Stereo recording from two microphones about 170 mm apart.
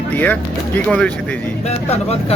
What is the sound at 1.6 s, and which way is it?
Speech, 40° left (ahead or behind).